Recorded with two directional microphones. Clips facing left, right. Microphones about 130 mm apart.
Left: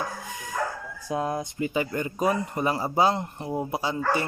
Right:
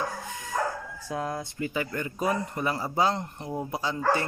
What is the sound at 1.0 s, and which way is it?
Speech, 20° left (ahead or behind).